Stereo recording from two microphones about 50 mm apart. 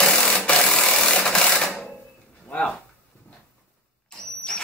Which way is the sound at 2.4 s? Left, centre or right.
Centre.